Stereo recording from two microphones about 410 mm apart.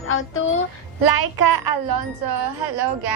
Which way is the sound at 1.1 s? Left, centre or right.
Right.